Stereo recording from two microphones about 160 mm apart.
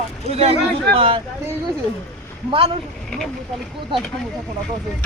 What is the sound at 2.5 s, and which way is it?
Speech, 35° right (ahead or behind).